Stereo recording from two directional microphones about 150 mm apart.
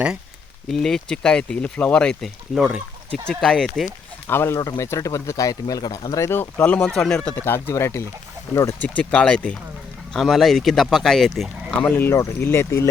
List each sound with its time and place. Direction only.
0.7 s speech: 5° left (ahead or behind)
4.3 s speech: 15° left (ahead or behind)